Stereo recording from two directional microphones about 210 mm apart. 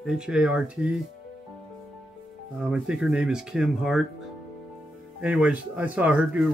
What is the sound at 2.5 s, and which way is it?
Speech, 5° right (ahead or behind).